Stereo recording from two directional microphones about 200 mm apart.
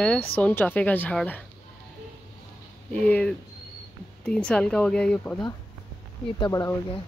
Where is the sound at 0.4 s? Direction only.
10° left (ahead or behind).